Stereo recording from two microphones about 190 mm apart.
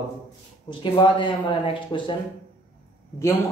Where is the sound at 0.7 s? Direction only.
25° left (ahead or behind).